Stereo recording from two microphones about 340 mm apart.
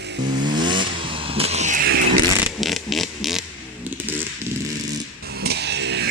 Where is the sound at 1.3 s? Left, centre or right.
Centre.